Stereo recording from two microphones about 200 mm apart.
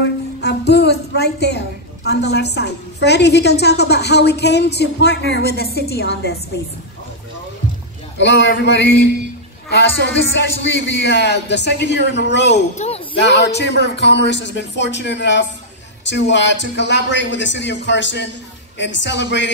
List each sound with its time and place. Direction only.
0.4 s a sound: 55° left (ahead or behind)
2.0 s a woman's voice: 55° left (ahead or behind)
8.2 s a woman's voice: 60° left (ahead or behind)
12.7 s speech: 35° left (ahead or behind)
13.2 s a woman's voice: 60° left (ahead or behind)